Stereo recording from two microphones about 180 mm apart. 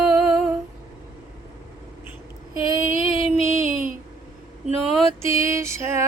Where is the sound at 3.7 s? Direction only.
50° right (ahead or behind).